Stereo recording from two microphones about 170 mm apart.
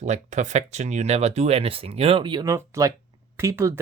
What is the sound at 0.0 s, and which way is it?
Speech, 45° right (ahead or behind).